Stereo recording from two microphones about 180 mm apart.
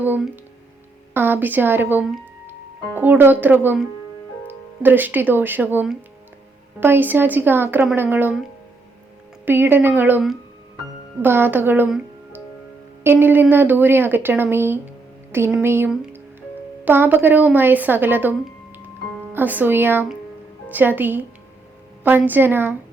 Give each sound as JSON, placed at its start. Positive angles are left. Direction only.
{"t": 0.0, "sound": "speech", "side_deg": -10}
{"t": 9.5, "sound": "speech", "side_deg": -10}